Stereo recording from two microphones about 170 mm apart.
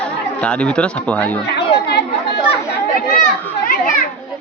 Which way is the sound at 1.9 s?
75° left (ahead or behind).